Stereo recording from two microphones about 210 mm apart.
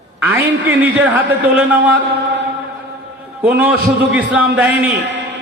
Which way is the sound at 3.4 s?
5° right (ahead or behind).